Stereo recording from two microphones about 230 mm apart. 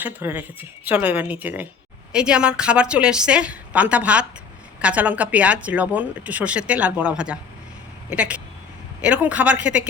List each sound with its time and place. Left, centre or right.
0.0 s a woman's voice: centre